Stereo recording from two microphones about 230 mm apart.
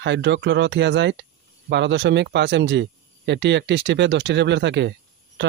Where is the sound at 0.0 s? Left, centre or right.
Right.